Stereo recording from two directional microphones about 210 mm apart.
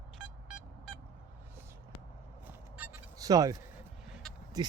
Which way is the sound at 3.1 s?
15° right (ahead or behind).